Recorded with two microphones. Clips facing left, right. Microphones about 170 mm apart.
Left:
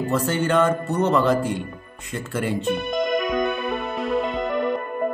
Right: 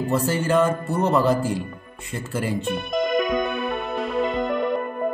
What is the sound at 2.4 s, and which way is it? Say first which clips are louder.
Music: left 4 dB; centre (ahead or behind).